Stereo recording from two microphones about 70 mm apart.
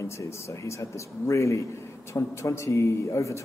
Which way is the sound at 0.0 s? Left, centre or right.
Left.